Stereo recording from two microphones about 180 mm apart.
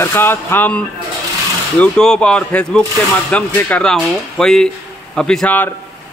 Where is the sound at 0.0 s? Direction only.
10° left (ahead or behind).